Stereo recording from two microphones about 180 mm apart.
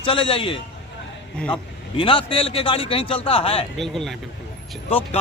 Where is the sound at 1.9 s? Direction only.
30° left (ahead or behind).